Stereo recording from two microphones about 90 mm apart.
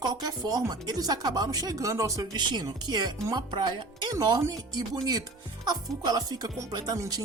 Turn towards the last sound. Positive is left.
turn(degrees=-50)  # may be behind; listen again after turning